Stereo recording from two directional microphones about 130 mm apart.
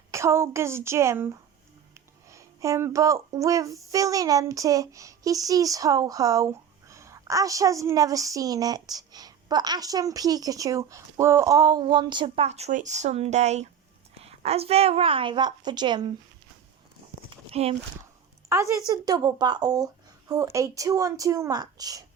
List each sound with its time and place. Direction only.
0.1 s speech: 20° right (ahead or behind); by 12.5 s 40° right (ahead or behind)
12.5 s a woman's voice: 60° right (ahead or behind); by 16.1 s 35° right (ahead or behind)
17.2 s a sound: 50° right (ahead or behind)
18.4 s a woman's voice: 25° right (ahead or behind)